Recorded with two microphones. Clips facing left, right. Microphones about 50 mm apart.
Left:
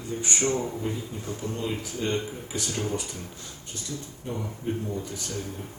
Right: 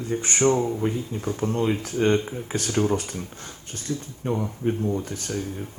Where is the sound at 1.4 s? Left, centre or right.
Right.